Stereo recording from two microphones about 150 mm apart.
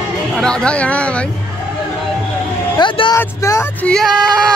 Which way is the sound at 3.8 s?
5° left (ahead or behind).